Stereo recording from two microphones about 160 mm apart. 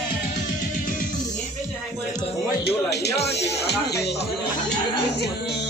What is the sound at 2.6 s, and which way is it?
Speech, 90° left.